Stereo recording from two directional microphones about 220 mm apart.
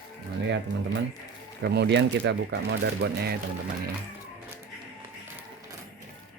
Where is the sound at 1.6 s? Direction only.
50° right (ahead or behind).